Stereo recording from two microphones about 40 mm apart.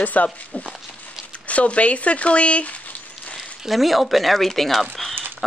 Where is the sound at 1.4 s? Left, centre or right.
Left.